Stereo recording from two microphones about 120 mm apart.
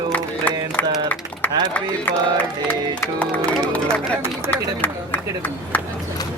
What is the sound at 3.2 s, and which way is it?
Speech, 10° left (ahead or behind).